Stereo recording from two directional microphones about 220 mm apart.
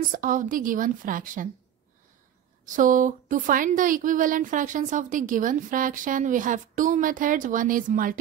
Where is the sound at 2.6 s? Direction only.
35° right (ahead or behind).